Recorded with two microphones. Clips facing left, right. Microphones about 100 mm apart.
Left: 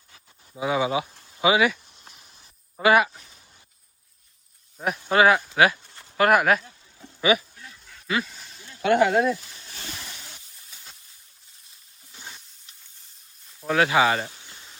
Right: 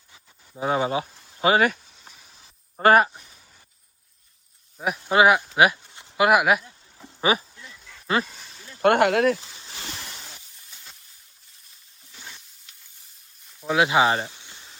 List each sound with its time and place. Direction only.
0.6 s speech: 40° right (ahead or behind)
1.8 s a sound: 5° right (ahead or behind)
2.8 s speech: 40° right (ahead or behind)
3.2 s a sound: centre (ahead or behind)
4.8 s speech: 5° right (ahead or behind)
5.0 s speech: 15° right (ahead or behind)
5.5 s a sound: 20° right (ahead or behind)
6.2 s speech: 10° right (ahead or behind)
7.2 s speech: 35° right (ahead or behind)
8.8 s speech: 65° right (ahead or behind)
10.6 s hiss: centre (ahead or behind)
13.6 s speech: 15° right (ahead or behind)
14.3 s snake: centre (ahead or behind)